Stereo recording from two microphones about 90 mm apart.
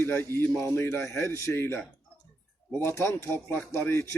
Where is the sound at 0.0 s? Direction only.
25° left (ahead or behind).